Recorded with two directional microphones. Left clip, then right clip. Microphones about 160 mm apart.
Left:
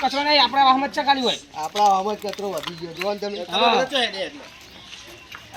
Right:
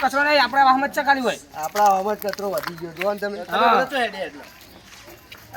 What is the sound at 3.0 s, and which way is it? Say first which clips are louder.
Speech: right 2 dB; 15° right (ahead or behind).